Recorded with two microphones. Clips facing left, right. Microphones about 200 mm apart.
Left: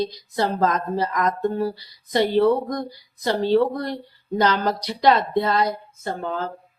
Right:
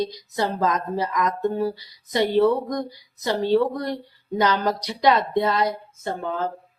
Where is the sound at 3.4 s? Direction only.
15° right (ahead or behind).